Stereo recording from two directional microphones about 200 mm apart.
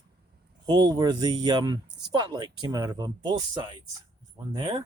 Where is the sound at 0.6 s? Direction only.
20° right (ahead or behind).